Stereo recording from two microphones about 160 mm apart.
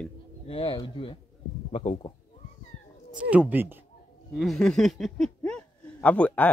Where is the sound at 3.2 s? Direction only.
10° right (ahead or behind).